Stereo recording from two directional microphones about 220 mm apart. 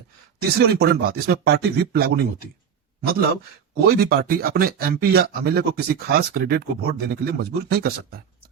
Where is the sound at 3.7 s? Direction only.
45° right (ahead or behind).